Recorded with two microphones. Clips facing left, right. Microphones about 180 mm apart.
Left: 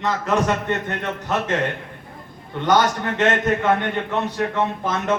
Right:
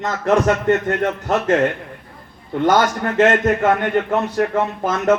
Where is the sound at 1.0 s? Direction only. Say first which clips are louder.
Right 5 dB; 45° right (ahead or behind).